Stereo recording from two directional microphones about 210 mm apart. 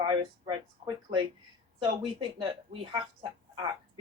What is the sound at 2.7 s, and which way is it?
Speech, 20° right (ahead or behind).